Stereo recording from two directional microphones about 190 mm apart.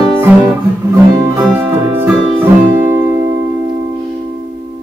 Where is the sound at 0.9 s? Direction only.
15° right (ahead or behind).